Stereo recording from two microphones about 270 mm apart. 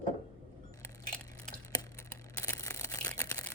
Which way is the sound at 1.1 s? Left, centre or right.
Centre.